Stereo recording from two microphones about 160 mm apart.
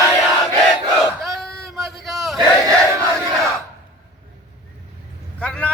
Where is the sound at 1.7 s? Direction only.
Centre (ahead or behind).